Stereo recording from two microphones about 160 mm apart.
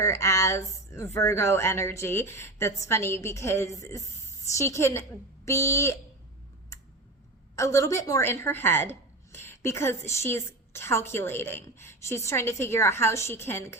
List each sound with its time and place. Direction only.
0.0 s a woman's voice: 15° left (ahead or behind)
7.5 s a woman's voice: 20° left (ahead or behind)